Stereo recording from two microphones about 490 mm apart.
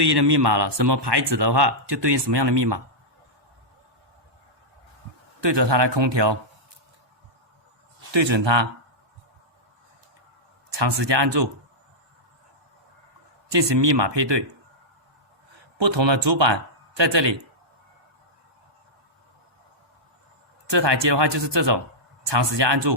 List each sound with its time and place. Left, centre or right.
0.0 s speech: right
5.4 s speech: right
8.1 s speech: right
10.7 s speech: right
13.5 s speech: right
15.8 s speech: right
20.7 s speech: right